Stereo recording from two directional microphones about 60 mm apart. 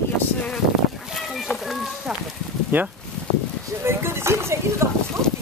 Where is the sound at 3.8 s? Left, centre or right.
Right.